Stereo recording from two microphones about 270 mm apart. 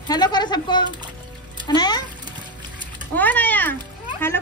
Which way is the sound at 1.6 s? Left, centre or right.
Centre.